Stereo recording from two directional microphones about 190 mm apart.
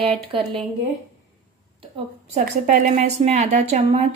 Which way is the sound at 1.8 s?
35° right (ahead or behind).